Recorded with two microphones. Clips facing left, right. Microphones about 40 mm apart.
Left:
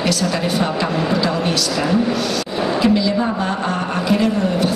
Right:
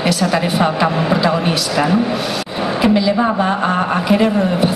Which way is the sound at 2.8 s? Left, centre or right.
Centre.